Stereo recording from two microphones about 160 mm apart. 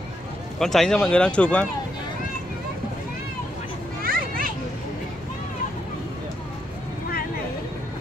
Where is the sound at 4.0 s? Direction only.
65° right (ahead or behind).